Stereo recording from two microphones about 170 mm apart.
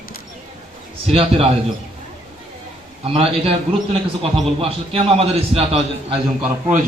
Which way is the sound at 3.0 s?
35° right (ahead or behind).